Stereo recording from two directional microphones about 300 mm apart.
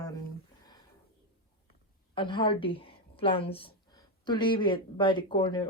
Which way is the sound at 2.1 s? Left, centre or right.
Centre.